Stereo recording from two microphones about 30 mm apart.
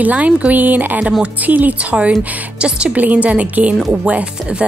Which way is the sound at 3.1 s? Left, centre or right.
Right.